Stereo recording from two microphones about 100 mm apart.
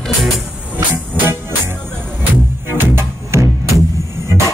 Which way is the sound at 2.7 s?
25° right (ahead or behind).